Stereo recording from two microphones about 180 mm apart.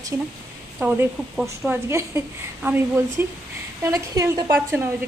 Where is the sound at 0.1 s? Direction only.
10° right (ahead or behind).